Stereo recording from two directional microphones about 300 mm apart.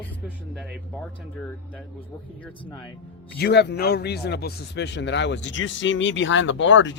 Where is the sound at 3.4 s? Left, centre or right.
Left.